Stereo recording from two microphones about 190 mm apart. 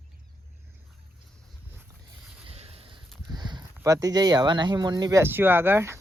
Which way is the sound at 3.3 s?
20° right (ahead or behind).